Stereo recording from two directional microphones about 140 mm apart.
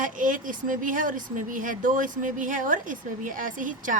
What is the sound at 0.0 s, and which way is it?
A woman's voice, 70° right (ahead or behind).